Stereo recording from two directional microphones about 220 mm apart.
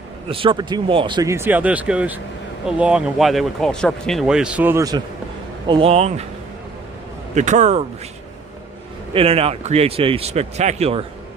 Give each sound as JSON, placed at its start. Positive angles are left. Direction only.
{"t": 0.3, "sound": "speech", "side_deg": -25}
{"t": 7.3, "sound": "speech", "side_deg": -35}
{"t": 9.1, "sound": "speech", "side_deg": -25}